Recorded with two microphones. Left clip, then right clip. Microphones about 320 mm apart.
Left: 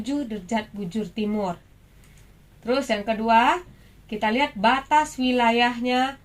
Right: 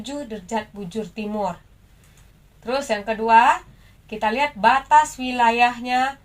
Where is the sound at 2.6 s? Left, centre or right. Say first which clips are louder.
Even; right.